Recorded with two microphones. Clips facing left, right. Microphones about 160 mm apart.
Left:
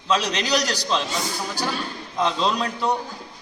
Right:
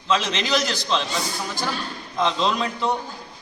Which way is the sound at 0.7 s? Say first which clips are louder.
Even; 5° left (ahead or behind).